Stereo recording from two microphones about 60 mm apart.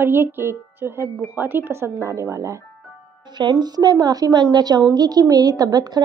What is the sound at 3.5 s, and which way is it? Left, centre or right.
A woman's voice, right.